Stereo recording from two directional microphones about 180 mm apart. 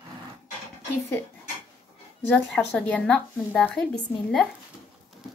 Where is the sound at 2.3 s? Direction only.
5° left (ahead or behind).